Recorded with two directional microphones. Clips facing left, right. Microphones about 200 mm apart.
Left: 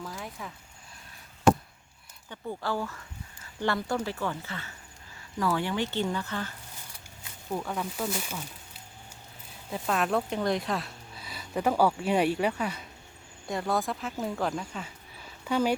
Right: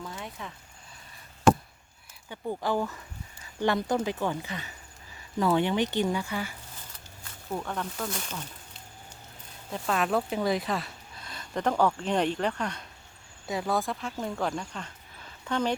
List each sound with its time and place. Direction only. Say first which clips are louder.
0.0 s a sound: even; centre (ahead or behind)
2.3 s speech: right 3 dB; 15° right (ahead or behind)
7.5 s speech: left 1 dB; 5° left (ahead or behind)
9.6 s speech: even; centre (ahead or behind)